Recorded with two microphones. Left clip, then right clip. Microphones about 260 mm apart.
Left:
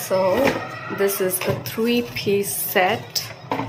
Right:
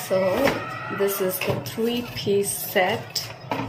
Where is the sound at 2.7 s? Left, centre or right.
Centre.